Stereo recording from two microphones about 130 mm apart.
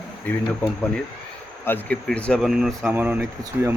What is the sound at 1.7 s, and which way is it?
Speech, 15° left (ahead or behind).